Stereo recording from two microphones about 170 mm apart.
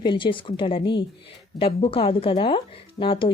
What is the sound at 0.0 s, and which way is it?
A woman's voice, 30° left (ahead or behind).